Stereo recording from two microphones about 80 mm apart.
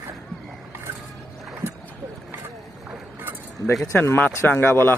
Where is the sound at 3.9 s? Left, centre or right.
Left.